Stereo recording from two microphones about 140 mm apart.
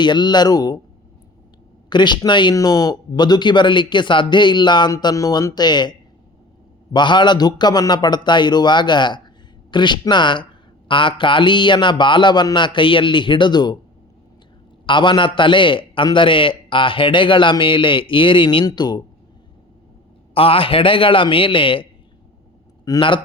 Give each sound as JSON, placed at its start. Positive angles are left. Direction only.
{"t": 0.0, "sound": "a man's voice", "side_deg": 30}
{"t": 1.9, "sound": "a man's voice", "side_deg": 35}
{"t": 14.8, "sound": "a man's voice", "side_deg": 35}
{"t": 20.3, "sound": "a man's voice", "side_deg": 40}
{"t": 22.9, "sound": "a man's voice", "side_deg": 35}